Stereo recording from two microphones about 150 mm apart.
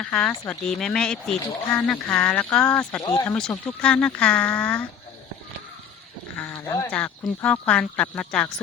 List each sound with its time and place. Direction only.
0.0 s speech: 5° left (ahead or behind)
3.0 s speech: 25° left (ahead or behind)
3.2 s speech: 5° left (ahead or behind)
6.3 s a sound: 10° left (ahead or behind)
6.9 s speech: 10° left (ahead or behind)